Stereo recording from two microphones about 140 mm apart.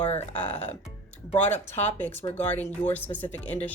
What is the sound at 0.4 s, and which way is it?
Speech, 50° left (ahead or behind).